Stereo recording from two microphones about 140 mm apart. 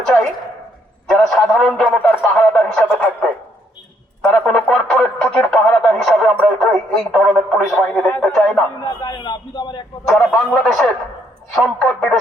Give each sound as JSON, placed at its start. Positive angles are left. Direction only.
{"t": 0.0, "sound": "a sound", "side_deg": 5}
{"t": 1.0, "sound": "a man's voice", "side_deg": 0}
{"t": 4.2, "sound": "music", "side_deg": 5}
{"t": 8.2, "sound": "a man's voice", "side_deg": 5}
{"t": 8.8, "sound": "a man's voice", "side_deg": 25}
{"t": 10.2, "sound": "a man's voice", "side_deg": 0}